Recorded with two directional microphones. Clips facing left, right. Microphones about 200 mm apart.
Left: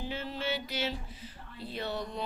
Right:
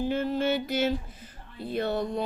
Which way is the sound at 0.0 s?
50° right (ahead or behind).